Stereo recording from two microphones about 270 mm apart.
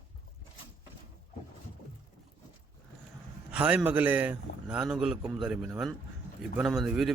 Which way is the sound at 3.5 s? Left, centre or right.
Centre.